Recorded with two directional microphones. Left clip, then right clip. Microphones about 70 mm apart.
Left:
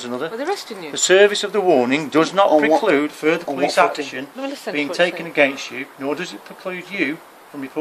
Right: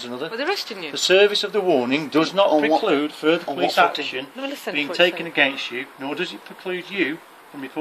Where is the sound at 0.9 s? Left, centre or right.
Left.